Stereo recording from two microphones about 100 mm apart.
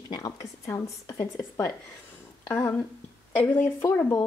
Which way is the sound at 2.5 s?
25° left (ahead or behind).